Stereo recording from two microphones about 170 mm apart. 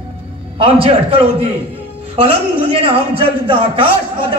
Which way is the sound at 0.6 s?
35° right (ahead or behind).